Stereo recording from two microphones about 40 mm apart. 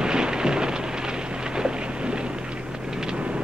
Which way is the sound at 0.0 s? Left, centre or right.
Centre.